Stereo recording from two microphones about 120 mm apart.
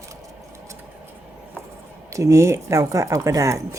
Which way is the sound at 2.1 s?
25° right (ahead or behind).